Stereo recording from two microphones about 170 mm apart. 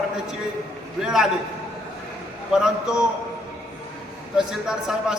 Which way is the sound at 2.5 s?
5° right (ahead or behind).